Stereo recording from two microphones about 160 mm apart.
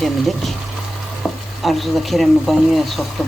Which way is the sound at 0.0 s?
Centre (ahead or behind).